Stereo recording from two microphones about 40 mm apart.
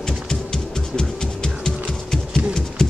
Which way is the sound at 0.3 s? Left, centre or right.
Centre.